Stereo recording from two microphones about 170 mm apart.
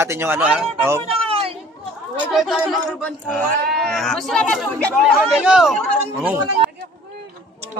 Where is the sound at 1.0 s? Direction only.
35° right (ahead or behind).